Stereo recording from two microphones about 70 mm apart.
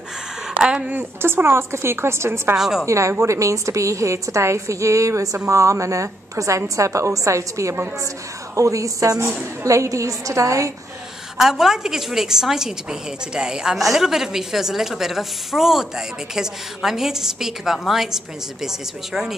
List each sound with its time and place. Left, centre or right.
0.6 s speech: centre
0.9 s a woman's voice: right
2.5 s a woman's voice: centre
2.9 s a woman's voice: right
11.3 s a woman's voice: centre